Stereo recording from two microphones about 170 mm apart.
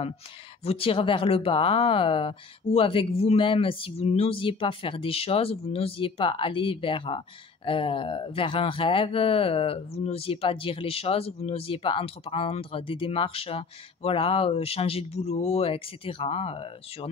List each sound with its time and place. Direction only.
0.7 s speech: 30° left (ahead or behind)